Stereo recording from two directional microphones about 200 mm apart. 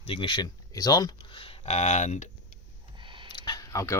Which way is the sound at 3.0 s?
25° right (ahead or behind).